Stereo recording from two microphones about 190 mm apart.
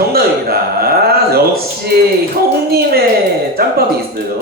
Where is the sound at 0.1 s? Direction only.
55° right (ahead or behind).